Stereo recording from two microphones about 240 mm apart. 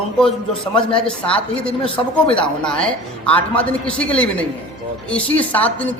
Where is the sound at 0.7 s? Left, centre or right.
Left.